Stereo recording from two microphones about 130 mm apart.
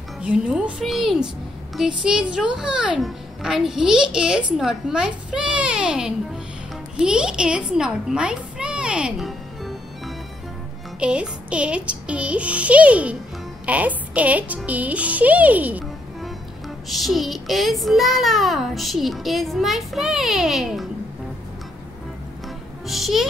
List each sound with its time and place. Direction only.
0.2 s music: 10° right (ahead or behind)
1.8 s a child's voice: 5° right (ahead or behind)
7.0 s a sound: 5° right (ahead or behind)
11.0 s music: 10° right (ahead or behind)
16.9 s a child's voice: centre (ahead or behind)
22.8 s a child's voice: centre (ahead or behind)